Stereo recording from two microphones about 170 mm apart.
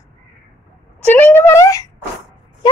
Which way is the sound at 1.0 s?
10° left (ahead or behind).